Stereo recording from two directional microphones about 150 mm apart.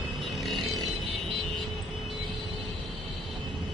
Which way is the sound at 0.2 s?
Centre (ahead or behind).